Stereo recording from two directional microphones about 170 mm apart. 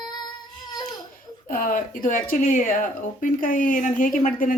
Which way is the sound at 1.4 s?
55° left (ahead or behind).